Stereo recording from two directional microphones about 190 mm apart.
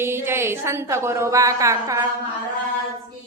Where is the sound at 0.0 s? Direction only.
15° right (ahead or behind).